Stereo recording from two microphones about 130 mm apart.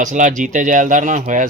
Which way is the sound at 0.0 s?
75° right (ahead or behind).